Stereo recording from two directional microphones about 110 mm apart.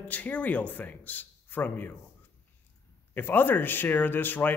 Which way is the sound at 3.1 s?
20° left (ahead or behind).